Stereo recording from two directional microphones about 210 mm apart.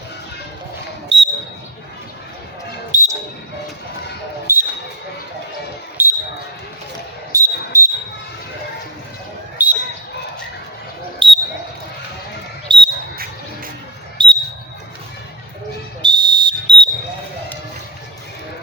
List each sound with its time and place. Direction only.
1.1 s basketball bounce: 55° right (ahead or behind)
2.9 s basketball bounce: 40° right (ahead or behind)
4.5 s basketball bounce: 10° right (ahead or behind)
6.0 s basketball bounce: 10° right (ahead or behind)
7.3 s a sound: 15° right (ahead or behind)
9.6 s basketball bounce: 10° right (ahead or behind)
11.2 s basketball bounce: 25° right (ahead or behind)
12.6 s basketball bounce: 25° right (ahead or behind)
14.2 s basketball bounce: 20° right (ahead or behind)
16.0 s a sound: 20° right (ahead or behind)